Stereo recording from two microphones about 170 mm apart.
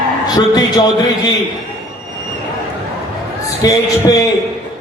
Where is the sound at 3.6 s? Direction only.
20° left (ahead or behind).